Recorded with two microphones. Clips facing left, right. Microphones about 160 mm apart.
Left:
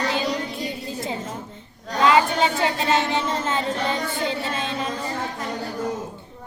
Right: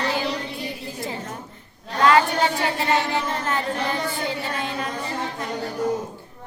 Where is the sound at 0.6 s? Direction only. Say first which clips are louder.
Left 2 dB; 20° left (ahead or behind).